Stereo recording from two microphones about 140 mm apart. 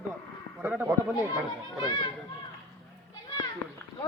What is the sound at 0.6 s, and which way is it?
Speech, 10° right (ahead or behind).